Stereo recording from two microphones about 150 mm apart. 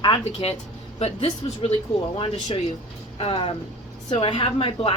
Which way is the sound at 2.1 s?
35° left (ahead or behind).